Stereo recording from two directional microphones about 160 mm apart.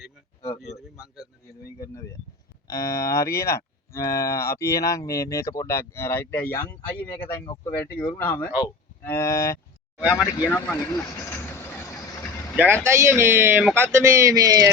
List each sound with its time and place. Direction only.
0.6 s a man's voice: centre (ahead or behind)
2.6 s speech: 20° left (ahead or behind)
9.0 s cattle: 20° left (ahead or behind)
10.0 s a man's voice: 5° right (ahead or behind)
10.5 s speech: 10° left (ahead or behind)
10.8 s vehicle: 20° left (ahead or behind)
12.5 s speech: 10° right (ahead or behind)